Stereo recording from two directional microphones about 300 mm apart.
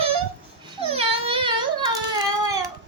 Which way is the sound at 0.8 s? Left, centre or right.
Centre.